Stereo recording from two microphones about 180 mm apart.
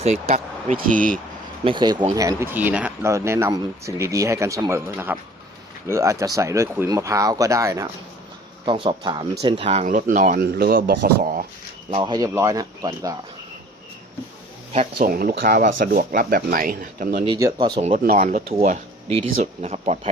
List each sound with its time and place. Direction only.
0.0 s speech: 35° right (ahead or behind)
1.6 s speech: 25° right (ahead or behind)
9.8 s speech: 45° right (ahead or behind)
11.9 s speech: 25° right (ahead or behind)
14.9 s speech: 55° right (ahead or behind)
17.2 s speech: 20° right (ahead or behind)
18.1 s speech: 50° right (ahead or behind)